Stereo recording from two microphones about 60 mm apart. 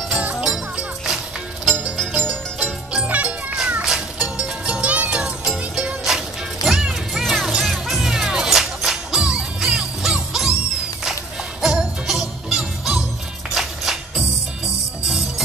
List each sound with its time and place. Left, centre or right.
0.1 s music: right
0.4 s music: centre
2.6 s music: centre
3.1 s music: right
3.8 s cat: centre
4.8 s music: right
5.2 s music: centre
11.6 s jingle bell: centre
13.6 s music: centre